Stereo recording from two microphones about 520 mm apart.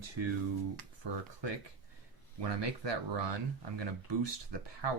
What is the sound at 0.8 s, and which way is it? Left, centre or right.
Speech, right.